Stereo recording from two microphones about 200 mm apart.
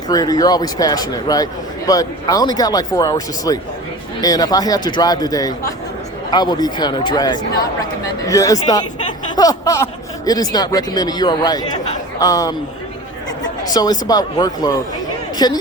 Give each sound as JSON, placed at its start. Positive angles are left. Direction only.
{"t": 0.1, "sound": "speech", "side_deg": 20}
{"t": 13.7, "sound": "speech", "side_deg": 20}